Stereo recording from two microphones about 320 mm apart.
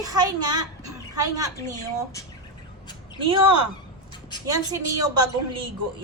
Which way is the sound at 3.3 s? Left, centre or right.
Centre.